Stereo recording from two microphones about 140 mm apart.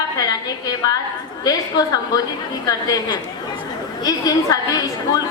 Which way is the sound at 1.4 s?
25° left (ahead or behind).